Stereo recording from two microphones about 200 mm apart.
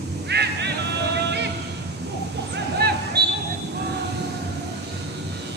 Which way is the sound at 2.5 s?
55° right (ahead or behind).